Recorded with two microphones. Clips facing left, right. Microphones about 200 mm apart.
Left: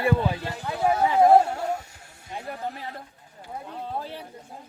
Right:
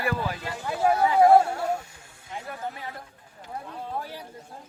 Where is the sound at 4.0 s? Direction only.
25° left (ahead or behind).